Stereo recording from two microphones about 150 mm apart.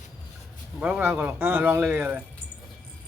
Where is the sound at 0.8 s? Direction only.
10° right (ahead or behind).